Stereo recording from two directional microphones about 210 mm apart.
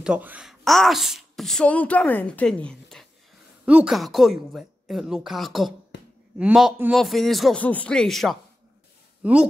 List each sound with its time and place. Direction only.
0.0 s speech: 5° right (ahead or behind)
5.9 s a sound: 55° left (ahead or behind)
6.3 s speech: 5° right (ahead or behind)